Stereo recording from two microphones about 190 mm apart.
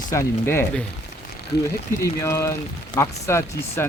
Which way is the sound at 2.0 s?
15° left (ahead or behind).